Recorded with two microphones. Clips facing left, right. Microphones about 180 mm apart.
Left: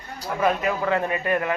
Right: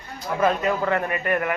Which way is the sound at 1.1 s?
20° left (ahead or behind).